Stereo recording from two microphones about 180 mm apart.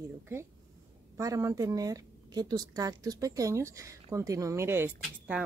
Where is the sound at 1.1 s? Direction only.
15° right (ahead or behind).